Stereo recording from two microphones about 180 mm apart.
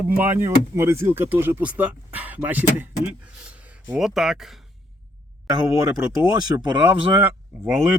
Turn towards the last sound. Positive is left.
turn(degrees=-5)  # may be behind; listen again after turning